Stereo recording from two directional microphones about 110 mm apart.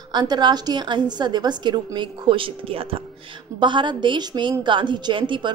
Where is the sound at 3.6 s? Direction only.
45° right (ahead or behind).